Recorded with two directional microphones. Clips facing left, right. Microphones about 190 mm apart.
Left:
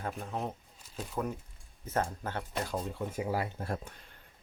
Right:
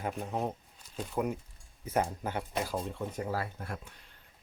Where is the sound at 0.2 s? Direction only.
15° right (ahead or behind); by 3.5 s 15° left (ahead or behind).